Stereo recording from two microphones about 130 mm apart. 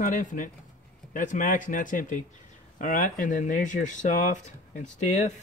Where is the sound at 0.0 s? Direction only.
90° left.